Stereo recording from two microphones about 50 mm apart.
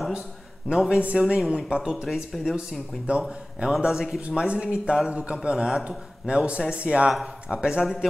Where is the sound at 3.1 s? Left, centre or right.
Right.